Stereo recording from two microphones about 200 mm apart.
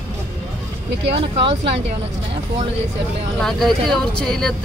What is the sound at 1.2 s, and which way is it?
Speech, 30° right (ahead or behind).